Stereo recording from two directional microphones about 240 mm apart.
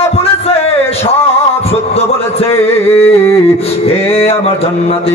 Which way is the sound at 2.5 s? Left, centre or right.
Centre.